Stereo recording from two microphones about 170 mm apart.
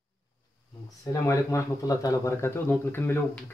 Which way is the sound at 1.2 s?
20° left (ahead or behind).